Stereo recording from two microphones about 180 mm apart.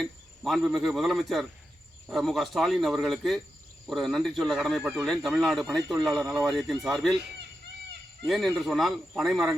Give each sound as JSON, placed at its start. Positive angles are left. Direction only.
{"t": 0.0, "sound": "a man's voice", "side_deg": 0}
{"t": 8.3, "sound": "a man's voice", "side_deg": 0}